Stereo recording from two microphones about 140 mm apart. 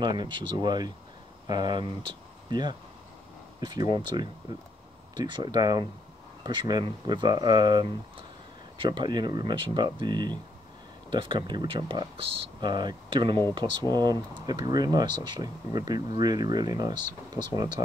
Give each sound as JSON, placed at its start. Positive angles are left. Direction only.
{"t": 0.0, "sound": "speech", "side_deg": -35}
{"t": 3.9, "sound": "speech", "side_deg": -30}